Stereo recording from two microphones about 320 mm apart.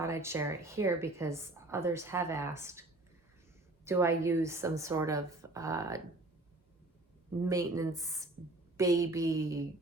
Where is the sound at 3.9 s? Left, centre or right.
Centre.